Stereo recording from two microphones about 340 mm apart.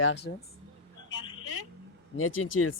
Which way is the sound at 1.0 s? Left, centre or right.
Left.